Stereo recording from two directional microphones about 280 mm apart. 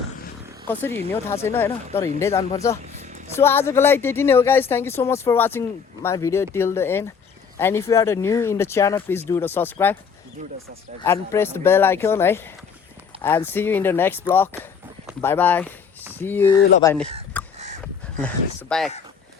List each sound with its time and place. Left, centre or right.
0.7 s speech: centre
2.9 s a sound: right
3.3 s speech: centre
11.0 s speech: centre
17.4 s crow: centre
18.7 s speech: centre